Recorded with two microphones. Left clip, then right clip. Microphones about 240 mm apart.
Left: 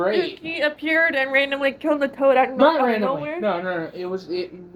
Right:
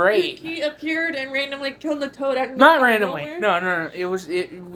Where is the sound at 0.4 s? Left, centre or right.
Left.